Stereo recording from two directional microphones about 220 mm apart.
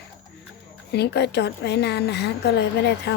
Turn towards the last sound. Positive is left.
turn(degrees=50)  # may be behind; listen again after turning